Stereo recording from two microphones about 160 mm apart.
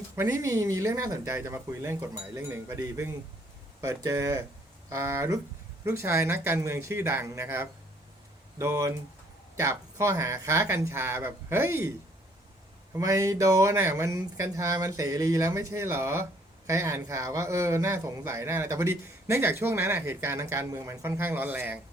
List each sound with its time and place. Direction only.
0.2 s speech: 20° right (ahead or behind)